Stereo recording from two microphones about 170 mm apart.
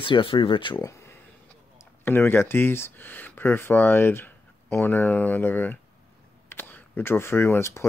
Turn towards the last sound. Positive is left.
turn(degrees=15)  # may be behind; listen again after turning